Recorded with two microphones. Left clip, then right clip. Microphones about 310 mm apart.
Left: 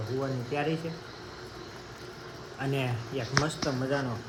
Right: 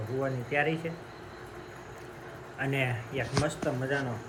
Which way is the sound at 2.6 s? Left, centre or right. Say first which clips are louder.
Right 2 dB; centre.